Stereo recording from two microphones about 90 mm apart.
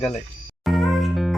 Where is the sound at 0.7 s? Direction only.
Centre (ahead or behind).